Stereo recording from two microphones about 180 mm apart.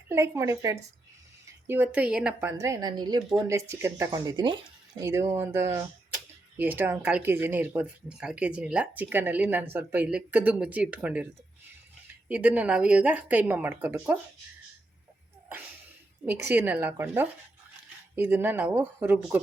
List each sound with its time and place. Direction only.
0.1 s a woman's voice: 15° right (ahead or behind)
12.3 s a woman's voice: 10° right (ahead or behind)
16.2 s a woman's voice: 10° right (ahead or behind)